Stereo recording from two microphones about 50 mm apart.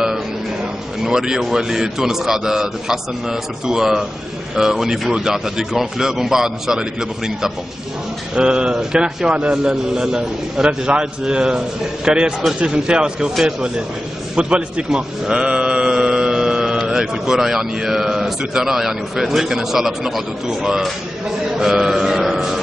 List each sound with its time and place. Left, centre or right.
1.0 s speech: centre
14.3 s a sound: right
16.8 s speech: centre
21.5 s mantra: centre